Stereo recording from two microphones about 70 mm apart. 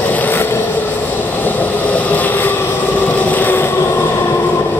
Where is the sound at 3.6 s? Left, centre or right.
Left.